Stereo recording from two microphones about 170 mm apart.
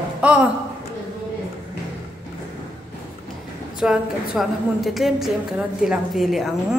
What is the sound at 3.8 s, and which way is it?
A woman's voice, 5° right (ahead or behind).